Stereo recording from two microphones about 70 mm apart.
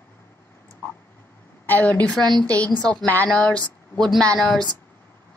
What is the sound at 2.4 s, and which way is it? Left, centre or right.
Speech, centre.